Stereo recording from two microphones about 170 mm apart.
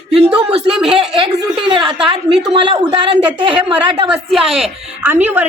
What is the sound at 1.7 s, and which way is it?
Speech, 30° right (ahead or behind).